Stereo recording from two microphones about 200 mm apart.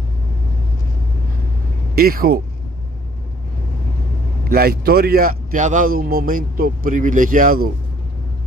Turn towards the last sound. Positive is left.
turn(degrees=-45)  # may be behind; listen again after turning